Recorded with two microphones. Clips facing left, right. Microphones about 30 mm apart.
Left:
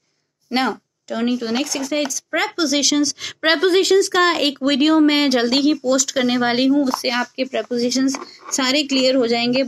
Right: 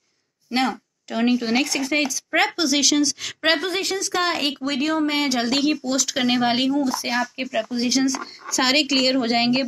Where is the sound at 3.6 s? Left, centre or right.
Left.